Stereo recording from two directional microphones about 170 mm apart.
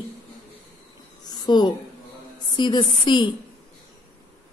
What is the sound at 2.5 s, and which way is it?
Speech, 25° left (ahead or behind).